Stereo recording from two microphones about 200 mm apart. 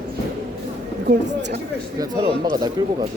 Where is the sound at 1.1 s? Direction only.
55° right (ahead or behind).